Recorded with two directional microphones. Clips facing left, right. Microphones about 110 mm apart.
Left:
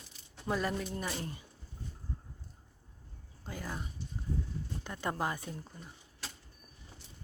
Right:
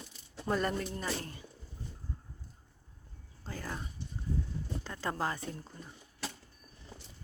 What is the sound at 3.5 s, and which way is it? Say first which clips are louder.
Child singing: even; 10° left (ahead or behind).